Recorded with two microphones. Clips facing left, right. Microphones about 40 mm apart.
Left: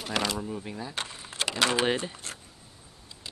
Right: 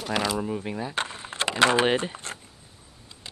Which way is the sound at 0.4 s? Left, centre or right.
Right.